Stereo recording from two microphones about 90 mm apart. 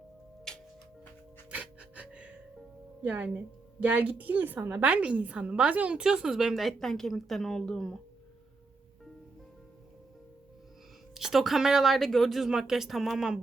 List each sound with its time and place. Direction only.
0.5 s music: 5° left (ahead or behind)
1.5 s music: 15° right (ahead or behind)
3.0 s a woman's voice: 15° right (ahead or behind); by 7.9 s 5° left (ahead or behind)
11.1 s a woman's voice: 5° right (ahead or behind)